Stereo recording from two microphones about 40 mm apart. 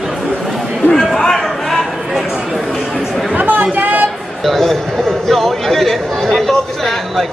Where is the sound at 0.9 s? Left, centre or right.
Centre.